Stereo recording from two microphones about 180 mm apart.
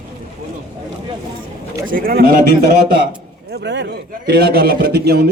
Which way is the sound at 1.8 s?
50° right (ahead or behind).